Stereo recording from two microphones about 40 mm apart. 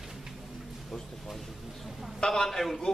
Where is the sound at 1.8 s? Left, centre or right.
Centre.